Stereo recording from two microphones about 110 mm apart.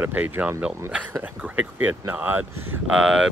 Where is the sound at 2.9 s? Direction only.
10° right (ahead or behind).